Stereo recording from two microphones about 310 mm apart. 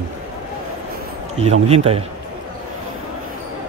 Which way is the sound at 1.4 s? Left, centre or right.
Centre.